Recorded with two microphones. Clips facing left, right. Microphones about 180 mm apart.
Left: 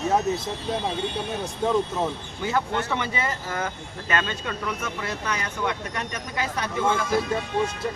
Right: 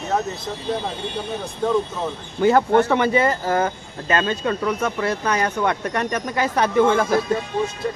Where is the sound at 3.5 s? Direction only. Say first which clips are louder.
Right 8 dB; 30° right (ahead or behind).